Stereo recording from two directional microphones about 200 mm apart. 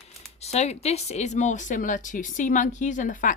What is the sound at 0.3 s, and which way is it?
Speech, 30° left (ahead or behind).